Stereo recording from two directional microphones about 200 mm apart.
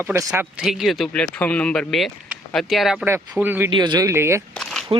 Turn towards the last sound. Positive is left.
turn(degrees=0)  # may be behind; listen again after turning